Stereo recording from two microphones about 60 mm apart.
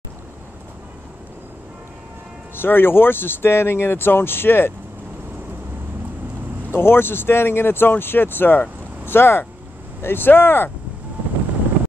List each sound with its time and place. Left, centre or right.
2.5 s speech: left
6.7 s speech: left